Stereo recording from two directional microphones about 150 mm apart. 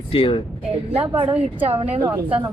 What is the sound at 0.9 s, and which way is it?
Speech, 40° right (ahead or behind).